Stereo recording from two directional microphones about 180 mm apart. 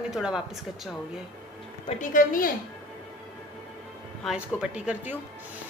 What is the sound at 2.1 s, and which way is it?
Speech, 50° left (ahead or behind).